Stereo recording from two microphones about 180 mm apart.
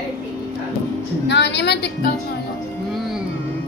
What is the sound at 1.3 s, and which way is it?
Speech, 70° left (ahead or behind).